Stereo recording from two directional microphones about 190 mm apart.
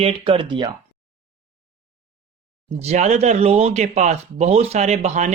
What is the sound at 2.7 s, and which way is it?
Speech, 35° right (ahead or behind).